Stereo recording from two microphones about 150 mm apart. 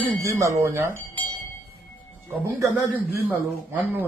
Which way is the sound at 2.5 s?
10° right (ahead or behind).